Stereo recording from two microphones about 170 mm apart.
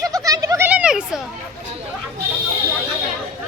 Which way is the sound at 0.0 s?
20° right (ahead or behind).